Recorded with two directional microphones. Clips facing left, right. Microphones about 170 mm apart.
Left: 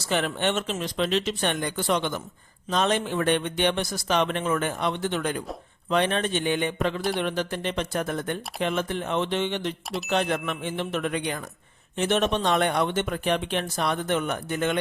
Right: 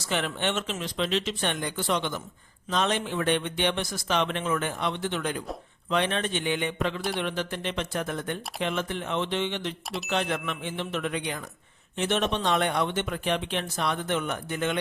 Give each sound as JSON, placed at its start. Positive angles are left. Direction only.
{"t": 0.0, "sound": "speech", "side_deg": 40}